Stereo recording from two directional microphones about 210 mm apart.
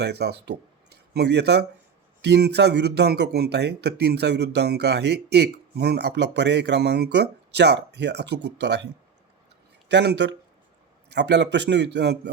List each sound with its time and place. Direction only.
0.0 s speech: 50° right (ahead or behind)
0.9 s a sound: 50° right (ahead or behind)
2.2 s speech: 50° right (ahead or behind)
9.9 s a man's voice: 55° right (ahead or behind)